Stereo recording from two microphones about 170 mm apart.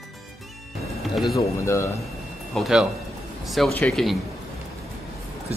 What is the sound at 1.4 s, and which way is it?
Speech, 15° left (ahead or behind).